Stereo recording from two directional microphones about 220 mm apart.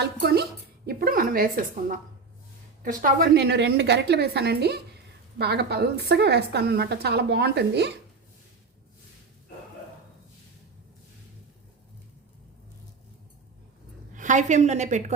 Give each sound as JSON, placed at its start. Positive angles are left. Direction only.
{"t": 0.0, "sound": "a woman's voice", "side_deg": -50}
{"t": 14.1, "sound": "a woman's voice", "side_deg": -35}